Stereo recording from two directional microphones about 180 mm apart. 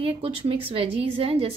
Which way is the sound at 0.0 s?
30° right (ahead or behind).